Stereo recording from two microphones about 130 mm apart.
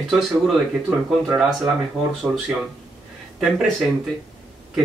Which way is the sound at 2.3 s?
15° right (ahead or behind).